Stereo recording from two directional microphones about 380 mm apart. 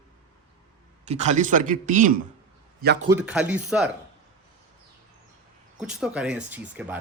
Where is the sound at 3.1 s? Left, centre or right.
Centre.